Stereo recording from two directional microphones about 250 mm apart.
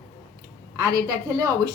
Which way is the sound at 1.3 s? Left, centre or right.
Centre.